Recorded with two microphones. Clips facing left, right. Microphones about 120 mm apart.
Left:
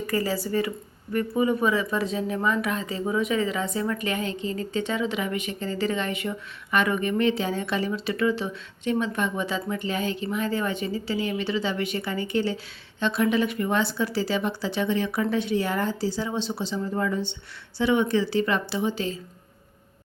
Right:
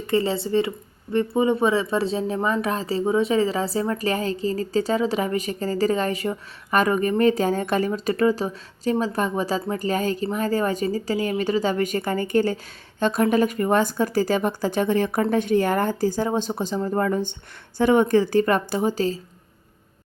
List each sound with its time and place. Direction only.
0.1 s speech: 25° right (ahead or behind)